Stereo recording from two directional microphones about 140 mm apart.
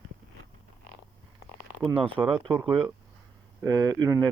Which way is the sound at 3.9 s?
30° right (ahead or behind).